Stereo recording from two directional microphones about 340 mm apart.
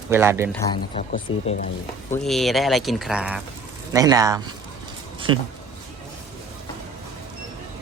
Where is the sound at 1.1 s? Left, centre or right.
Left.